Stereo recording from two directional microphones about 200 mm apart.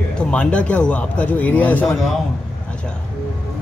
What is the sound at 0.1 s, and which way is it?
A man's voice, 5° left (ahead or behind).